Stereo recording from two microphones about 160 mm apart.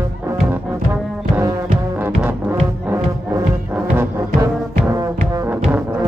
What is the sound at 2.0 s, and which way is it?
Music, 10° right (ahead or behind).